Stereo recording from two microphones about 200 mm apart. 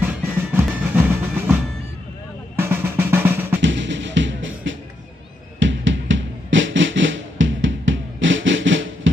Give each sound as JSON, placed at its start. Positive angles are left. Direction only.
{"t": 0.0, "sound": "music", "side_deg": -10}
{"t": 2.6, "sound": "drum", "side_deg": -10}
{"t": 3.6, "sound": "music", "side_deg": -65}